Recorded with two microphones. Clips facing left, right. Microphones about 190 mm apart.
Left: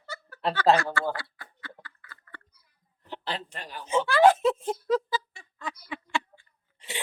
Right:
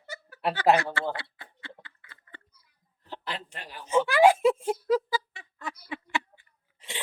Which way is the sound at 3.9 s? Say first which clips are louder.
Even; 10° right (ahead or behind).